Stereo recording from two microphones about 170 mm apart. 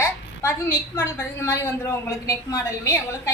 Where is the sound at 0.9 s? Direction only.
15° left (ahead or behind).